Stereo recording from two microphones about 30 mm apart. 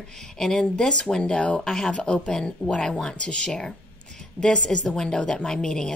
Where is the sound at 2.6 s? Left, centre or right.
Left.